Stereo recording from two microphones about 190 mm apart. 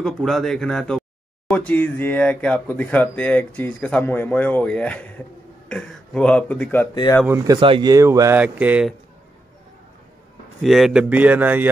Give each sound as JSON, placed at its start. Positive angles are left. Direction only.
{"t": 0.0, "sound": "speech", "side_deg": 0}
{"t": 7.2, "sound": "speech", "side_deg": -15}
{"t": 10.6, "sound": "speech", "side_deg": 0}